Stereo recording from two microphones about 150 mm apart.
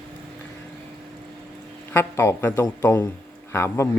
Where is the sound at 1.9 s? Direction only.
15° left (ahead or behind).